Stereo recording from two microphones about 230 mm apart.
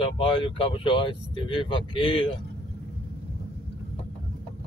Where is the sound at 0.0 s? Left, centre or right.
Left.